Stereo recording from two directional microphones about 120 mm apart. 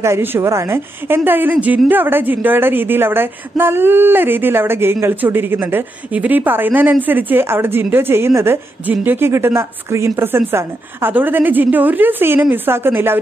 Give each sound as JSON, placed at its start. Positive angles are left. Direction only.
{"t": 0.0, "sound": "a woman's voice", "side_deg": -20}